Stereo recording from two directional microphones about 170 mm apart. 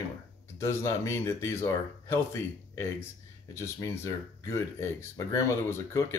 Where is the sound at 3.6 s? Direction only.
20° left (ahead or behind).